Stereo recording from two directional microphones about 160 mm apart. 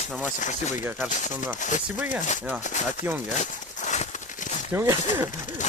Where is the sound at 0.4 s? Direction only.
50° left (ahead or behind).